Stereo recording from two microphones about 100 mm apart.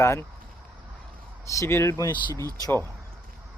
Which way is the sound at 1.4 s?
30° left (ahead or behind).